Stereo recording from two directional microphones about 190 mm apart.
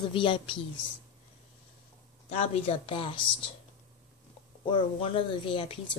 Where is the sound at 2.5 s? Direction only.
30° left (ahead or behind).